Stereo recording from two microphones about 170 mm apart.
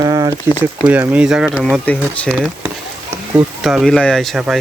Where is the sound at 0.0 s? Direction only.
25° right (ahead or behind).